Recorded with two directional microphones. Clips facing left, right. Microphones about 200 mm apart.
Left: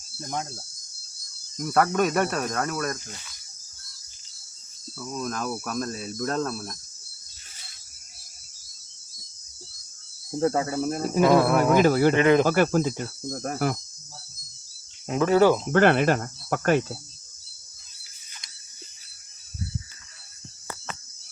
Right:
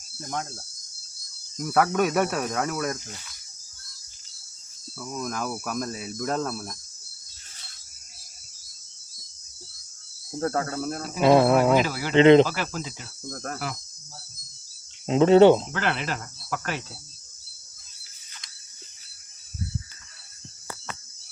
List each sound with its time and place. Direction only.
0.2 s cricket: 5° left (ahead or behind)
1.5 s cricket: 5° right (ahead or behind)
5.2 s cricket: 10° right (ahead or behind)
10.4 s cricket: 10° left (ahead or behind)
11.2 s speech: 25° right (ahead or behind)
11.8 s cricket: 50° left (ahead or behind)
12.1 s speech: 25° right (ahead or behind)
12.5 s cricket: 50° left (ahead or behind)
13.3 s cricket: 15° left (ahead or behind)
15.0 s speech: 25° right (ahead or behind)
15.7 s cricket: 55° left (ahead or behind)